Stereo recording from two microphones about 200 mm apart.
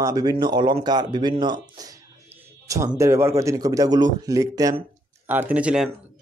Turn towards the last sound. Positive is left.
turn(degrees=-5)  # may be behind; listen again after turning